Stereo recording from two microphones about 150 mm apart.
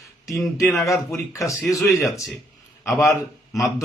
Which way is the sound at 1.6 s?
10° left (ahead or behind).